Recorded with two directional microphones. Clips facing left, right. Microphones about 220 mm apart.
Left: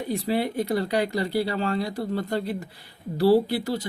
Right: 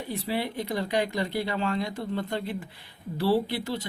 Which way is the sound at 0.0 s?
40° left (ahead or behind).